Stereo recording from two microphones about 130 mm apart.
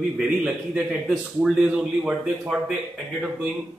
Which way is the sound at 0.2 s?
10° right (ahead or behind).